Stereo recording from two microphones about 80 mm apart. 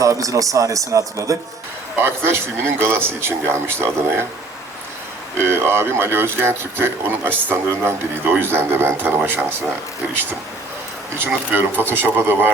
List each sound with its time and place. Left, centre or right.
0.0 s speech: right
2.0 s speech: right
5.4 s speech: right
11.1 s speech: right